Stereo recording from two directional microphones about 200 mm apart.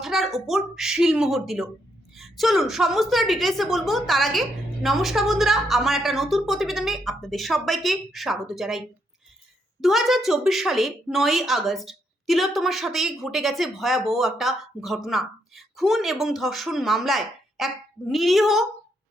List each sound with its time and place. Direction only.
0.0 s speech: centre (ahead or behind)
9.8 s speech: centre (ahead or behind)